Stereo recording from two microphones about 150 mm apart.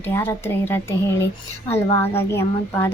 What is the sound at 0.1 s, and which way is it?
A woman's voice, 15° left (ahead or behind).